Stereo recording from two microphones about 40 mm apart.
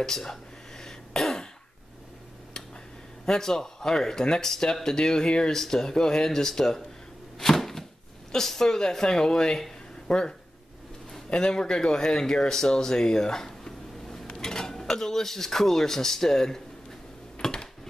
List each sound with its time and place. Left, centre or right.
0.0 s throat clearing: centre
3.3 s speech: centre
7.3 s a sound: centre
8.3 s speech: centre
14.3 s dishes: centre
14.8 s speech: centre
17.4 s a sound: centre